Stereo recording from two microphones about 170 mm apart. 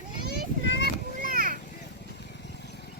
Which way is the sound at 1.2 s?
55° right (ahead or behind).